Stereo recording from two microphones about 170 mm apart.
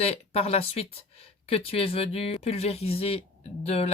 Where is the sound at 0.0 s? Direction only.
35° left (ahead or behind).